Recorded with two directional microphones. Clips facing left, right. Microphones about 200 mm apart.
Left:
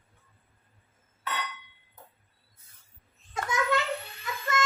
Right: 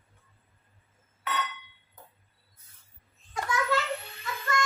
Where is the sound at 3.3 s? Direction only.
20° left (ahead or behind).